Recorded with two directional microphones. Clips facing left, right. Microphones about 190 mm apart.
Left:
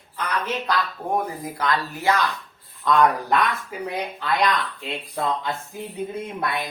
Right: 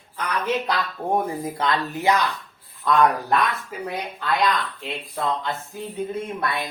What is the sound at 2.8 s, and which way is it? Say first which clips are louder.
Speech: even; 5° right (ahead or behind).